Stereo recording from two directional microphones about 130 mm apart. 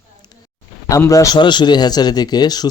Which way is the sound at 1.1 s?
25° left (ahead or behind).